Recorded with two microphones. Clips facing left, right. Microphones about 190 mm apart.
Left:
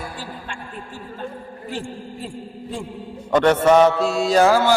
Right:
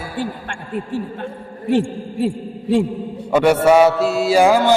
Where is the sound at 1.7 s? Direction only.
70° right (ahead or behind).